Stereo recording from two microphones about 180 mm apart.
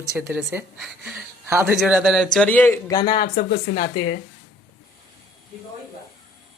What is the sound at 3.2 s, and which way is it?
Speech, 55° left (ahead or behind).